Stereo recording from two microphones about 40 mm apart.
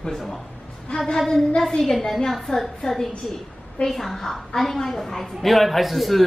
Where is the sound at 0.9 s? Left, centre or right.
Centre.